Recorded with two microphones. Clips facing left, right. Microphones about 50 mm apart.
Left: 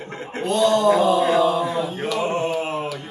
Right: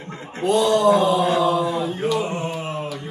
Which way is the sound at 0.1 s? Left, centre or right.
Left.